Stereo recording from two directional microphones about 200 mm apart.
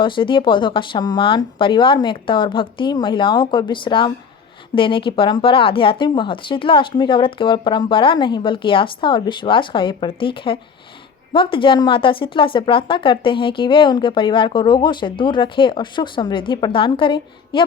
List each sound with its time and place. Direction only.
0.0 s a woman's voice: 25° left (ahead or behind)